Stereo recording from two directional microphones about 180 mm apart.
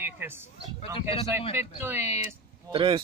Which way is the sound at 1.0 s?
30° left (ahead or behind).